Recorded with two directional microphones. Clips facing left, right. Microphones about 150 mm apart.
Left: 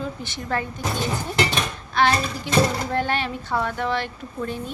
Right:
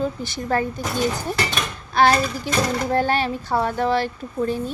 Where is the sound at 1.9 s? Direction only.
40° right (ahead or behind).